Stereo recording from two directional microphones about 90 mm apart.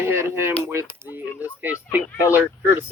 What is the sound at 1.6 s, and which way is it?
Speech, 15° right (ahead or behind).